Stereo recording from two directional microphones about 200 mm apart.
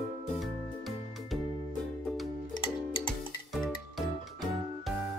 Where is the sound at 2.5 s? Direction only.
25° left (ahead or behind).